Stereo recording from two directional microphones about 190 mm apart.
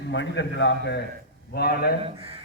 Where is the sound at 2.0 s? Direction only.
30° right (ahead or behind).